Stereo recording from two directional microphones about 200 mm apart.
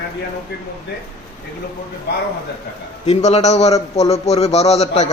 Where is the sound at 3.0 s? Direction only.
35° left (ahead or behind).